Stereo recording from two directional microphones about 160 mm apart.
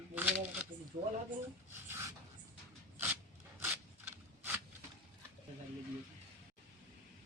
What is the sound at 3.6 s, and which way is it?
Mechanisms, 10° right (ahead or behind).